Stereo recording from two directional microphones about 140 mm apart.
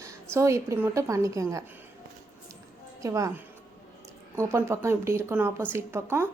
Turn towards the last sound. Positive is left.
turn(degrees=-20)  # may be behind; listen again after turning